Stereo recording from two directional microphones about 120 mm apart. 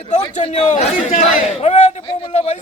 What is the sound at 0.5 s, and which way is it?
Speech, 70° left (ahead or behind).